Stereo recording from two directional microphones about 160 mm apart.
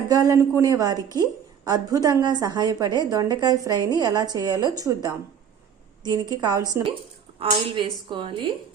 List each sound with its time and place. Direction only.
0.1 s a woman's voice: 20° right (ahead or behind)